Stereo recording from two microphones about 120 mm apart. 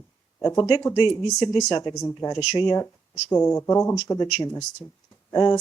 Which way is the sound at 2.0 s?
20° left (ahead or behind).